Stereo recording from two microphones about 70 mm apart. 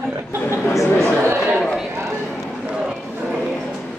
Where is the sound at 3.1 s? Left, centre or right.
Right.